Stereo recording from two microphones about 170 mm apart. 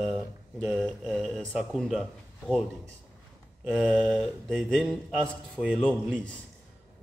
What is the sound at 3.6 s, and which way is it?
Speech, 5° right (ahead or behind).